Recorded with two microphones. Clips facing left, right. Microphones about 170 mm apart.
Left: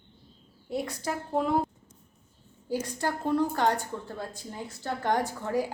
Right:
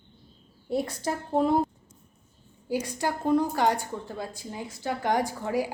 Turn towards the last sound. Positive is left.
turn(degrees=-10)  # may be behind; listen again after turning